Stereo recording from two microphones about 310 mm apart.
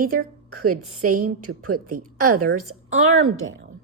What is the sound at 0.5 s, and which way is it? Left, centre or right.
A woman's voice, right.